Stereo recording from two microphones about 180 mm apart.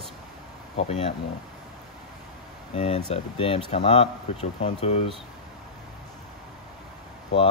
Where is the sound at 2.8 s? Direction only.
35° left (ahead or behind).